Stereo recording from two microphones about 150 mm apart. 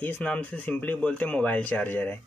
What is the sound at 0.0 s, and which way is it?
Speech, 10° left (ahead or behind).